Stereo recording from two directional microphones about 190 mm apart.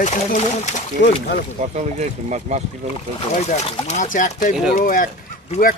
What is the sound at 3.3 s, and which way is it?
Speech, 35° left (ahead or behind).